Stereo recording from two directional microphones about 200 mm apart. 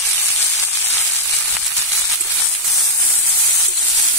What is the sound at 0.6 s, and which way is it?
Frying, 10° left (ahead or behind).